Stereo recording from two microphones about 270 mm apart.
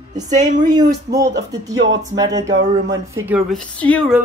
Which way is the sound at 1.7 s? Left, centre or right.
Right.